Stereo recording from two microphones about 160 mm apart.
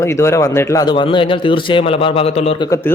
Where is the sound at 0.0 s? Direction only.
15° left (ahead or behind); by 2.6 s 40° left (ahead or behind).